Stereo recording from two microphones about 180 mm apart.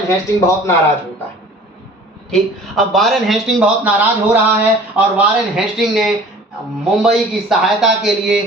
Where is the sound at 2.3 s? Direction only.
Centre (ahead or behind).